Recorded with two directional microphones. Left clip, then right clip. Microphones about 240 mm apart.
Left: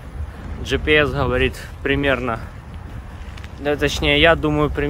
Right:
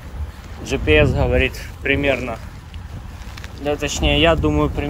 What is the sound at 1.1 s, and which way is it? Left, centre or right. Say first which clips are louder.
Speech: right 1 dB; left.